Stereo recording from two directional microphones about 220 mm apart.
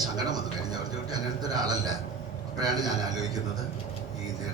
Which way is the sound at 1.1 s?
15° right (ahead or behind).